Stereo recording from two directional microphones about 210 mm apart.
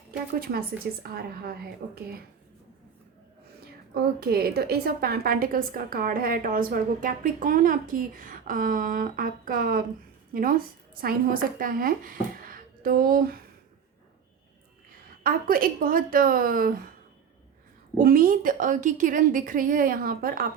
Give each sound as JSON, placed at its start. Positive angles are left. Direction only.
{"t": 0.3, "sound": "speech", "side_deg": -45}
{"t": 3.9, "sound": "a woman's voice", "side_deg": -50}
{"t": 15.2, "sound": "speech", "side_deg": -45}
{"t": 17.9, "sound": "a woman's voice", "side_deg": -40}